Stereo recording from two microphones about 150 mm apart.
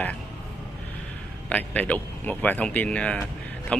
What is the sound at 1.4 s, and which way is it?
Speech, 10° left (ahead or behind).